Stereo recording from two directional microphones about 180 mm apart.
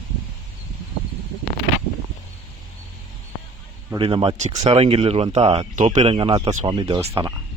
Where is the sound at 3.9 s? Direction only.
30° right (ahead or behind).